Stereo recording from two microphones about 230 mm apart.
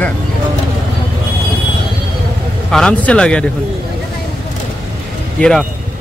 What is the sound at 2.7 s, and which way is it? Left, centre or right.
Speech, centre.